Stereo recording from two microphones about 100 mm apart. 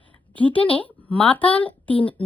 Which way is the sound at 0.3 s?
15° left (ahead or behind).